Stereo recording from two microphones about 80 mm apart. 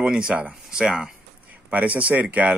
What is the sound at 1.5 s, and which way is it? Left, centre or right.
Speech, centre.